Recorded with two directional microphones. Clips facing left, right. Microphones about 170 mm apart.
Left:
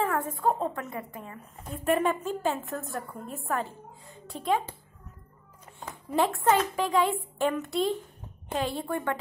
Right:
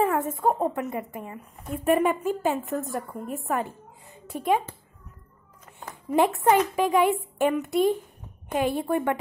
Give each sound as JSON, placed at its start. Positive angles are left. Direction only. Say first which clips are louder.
{"t": 0.0, "sound": "a woman's voice", "louder": "right 4 dB", "side_deg": -20}
{"t": 6.1, "sound": "a woman's voice", "louder": "right 4 dB", "side_deg": -15}